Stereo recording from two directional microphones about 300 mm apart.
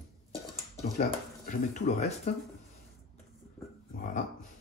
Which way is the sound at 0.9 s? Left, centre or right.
Left.